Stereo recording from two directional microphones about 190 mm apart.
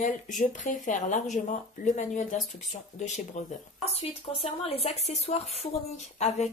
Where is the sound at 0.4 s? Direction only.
40° left (ahead or behind).